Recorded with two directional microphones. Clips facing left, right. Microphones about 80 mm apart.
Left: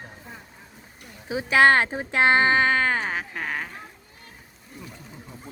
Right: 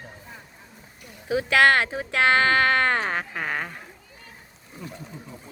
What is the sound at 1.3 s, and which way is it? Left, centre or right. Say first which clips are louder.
Speech: left 1 dB; left.